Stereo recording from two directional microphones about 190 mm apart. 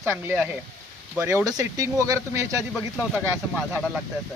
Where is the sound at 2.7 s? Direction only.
5° right (ahead or behind).